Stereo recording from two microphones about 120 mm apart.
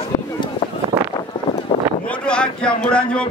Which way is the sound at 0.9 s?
55° right (ahead or behind).